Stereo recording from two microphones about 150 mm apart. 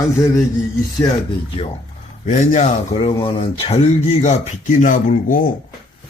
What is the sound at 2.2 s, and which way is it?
Speech, 55° left (ahead or behind).